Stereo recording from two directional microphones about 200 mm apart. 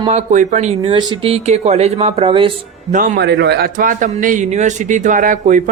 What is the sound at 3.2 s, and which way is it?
A man's voice, 55° right (ahead or behind).